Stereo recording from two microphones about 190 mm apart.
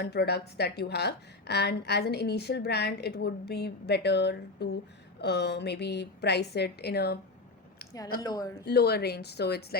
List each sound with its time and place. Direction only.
0.0 s a woman's voice: 60° left (ahead or behind)
8.2 s speech: 20° left (ahead or behind)
8.6 s a woman's voice: 60° left (ahead or behind)